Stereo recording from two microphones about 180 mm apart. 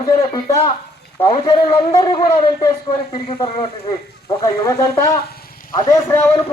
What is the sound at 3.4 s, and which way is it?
Speech, 35° left (ahead or behind).